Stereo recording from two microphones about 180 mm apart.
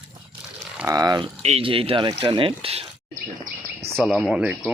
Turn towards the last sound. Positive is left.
turn(degrees=-5)  # may be behind; listen again after turning